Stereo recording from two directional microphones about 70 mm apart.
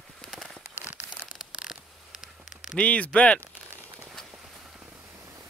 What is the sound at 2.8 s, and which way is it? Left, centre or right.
Speech, centre.